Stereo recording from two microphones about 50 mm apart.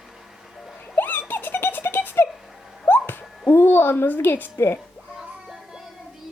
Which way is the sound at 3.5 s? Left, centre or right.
Left.